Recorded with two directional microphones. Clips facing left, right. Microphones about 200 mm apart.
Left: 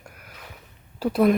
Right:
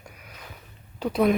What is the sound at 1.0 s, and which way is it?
Speech, 5° left (ahead or behind).